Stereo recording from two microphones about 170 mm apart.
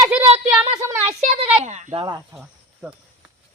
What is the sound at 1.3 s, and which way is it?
Speech, 40° right (ahead or behind).